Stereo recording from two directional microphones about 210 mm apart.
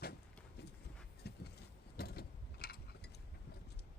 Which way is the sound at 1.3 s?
50° left (ahead or behind).